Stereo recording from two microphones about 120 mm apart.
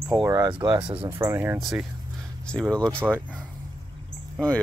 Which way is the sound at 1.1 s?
20° right (ahead or behind).